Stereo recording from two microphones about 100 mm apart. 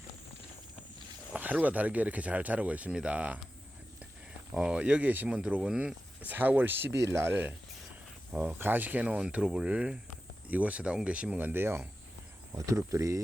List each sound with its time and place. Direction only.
1.3 s speech: 15° right (ahead or behind)
4.5 s speech: 10° right (ahead or behind); by 13.2 s 30° right (ahead or behind)